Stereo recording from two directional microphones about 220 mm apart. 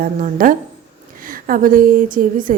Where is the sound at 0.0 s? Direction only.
40° right (ahead or behind).